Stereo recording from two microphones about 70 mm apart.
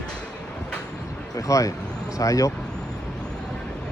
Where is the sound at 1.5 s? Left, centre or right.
Left.